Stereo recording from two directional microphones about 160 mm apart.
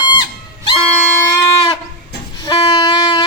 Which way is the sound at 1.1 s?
15° left (ahead or behind).